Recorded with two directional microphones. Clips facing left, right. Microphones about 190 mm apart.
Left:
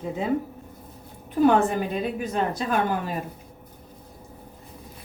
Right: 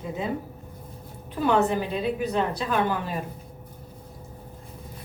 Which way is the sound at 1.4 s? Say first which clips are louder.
Left 3 dB; 50° left (ahead or behind).